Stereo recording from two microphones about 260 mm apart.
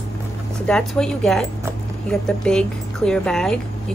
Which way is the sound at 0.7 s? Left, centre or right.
Centre.